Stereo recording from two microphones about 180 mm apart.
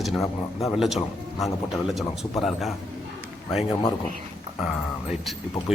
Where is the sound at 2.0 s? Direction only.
Centre (ahead or behind).